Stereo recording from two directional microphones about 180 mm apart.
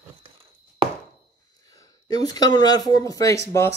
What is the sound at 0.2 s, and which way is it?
Chopping, 30° right (ahead or behind).